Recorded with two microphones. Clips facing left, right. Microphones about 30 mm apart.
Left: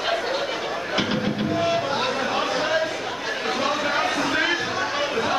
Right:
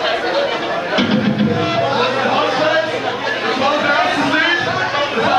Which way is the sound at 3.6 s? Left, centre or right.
Right.